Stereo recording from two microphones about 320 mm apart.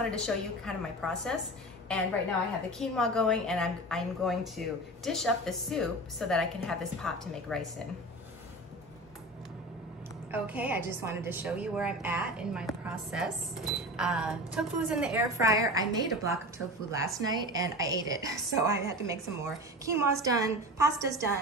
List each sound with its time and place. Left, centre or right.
0.1 s a woman's voice: centre
2.8 s a woman's voice: centre
10.3 s a woman's voice: centre